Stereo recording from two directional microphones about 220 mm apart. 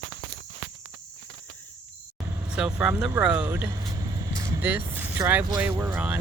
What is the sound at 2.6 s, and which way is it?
Speech, 5° right (ahead or behind).